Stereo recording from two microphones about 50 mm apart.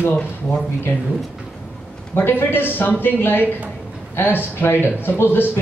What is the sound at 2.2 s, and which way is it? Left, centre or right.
Speech, left.